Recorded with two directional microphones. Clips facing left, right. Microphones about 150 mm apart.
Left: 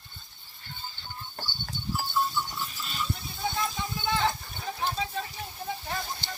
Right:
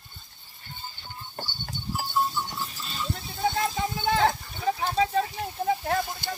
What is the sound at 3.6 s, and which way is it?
Clip-clop, 85° right.